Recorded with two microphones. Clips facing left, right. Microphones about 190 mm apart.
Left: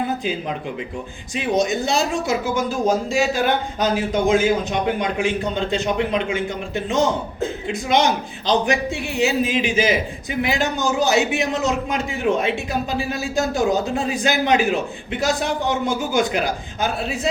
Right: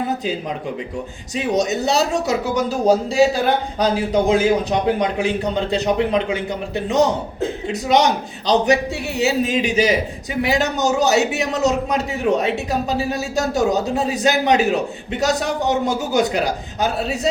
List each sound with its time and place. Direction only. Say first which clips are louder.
1.4 s a man's voice: right 1 dB; 40° right (ahead or behind)